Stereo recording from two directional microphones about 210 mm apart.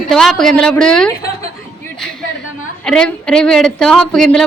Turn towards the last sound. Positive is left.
turn(degrees=5)  # may be behind; listen again after turning